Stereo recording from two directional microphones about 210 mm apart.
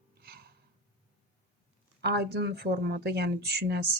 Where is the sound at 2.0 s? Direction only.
50° right (ahead or behind).